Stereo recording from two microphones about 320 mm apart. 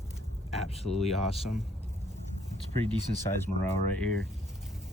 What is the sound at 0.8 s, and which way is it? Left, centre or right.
Speech, right.